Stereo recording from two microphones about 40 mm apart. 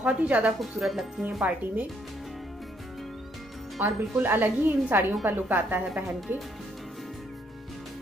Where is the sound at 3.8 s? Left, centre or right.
Right.